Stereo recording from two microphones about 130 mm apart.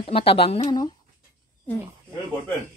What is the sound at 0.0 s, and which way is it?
Speech, 45° left (ahead or behind).